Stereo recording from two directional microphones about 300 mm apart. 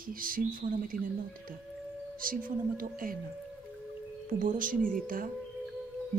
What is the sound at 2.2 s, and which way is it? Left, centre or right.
Speech, right.